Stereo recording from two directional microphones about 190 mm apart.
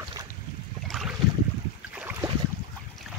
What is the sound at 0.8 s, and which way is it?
Boat, centre (ahead or behind).